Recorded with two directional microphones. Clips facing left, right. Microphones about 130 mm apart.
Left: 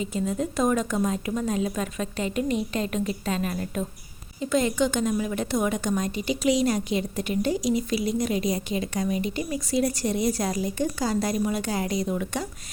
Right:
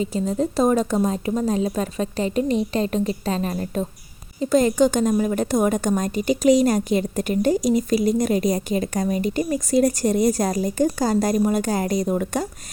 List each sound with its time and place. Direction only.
0.0 s a woman's voice: 35° right (ahead or behind)